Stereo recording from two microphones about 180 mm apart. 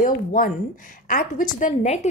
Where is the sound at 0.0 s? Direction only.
50° left (ahead or behind).